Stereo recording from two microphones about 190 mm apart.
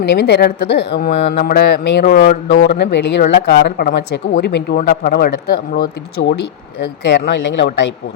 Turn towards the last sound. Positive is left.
turn(degrees=70)  # may be behind; listen again after turning